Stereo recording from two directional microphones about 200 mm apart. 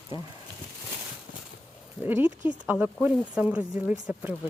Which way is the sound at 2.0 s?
10° right (ahead or behind).